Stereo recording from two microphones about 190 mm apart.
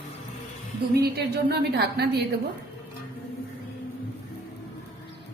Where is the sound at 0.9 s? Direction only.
55° right (ahead or behind).